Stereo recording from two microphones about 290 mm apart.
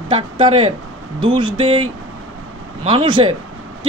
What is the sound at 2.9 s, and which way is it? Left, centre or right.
Speech, centre.